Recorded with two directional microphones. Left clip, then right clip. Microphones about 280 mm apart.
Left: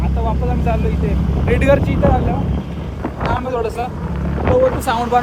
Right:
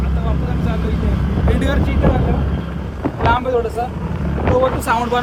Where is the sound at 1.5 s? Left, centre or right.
Left.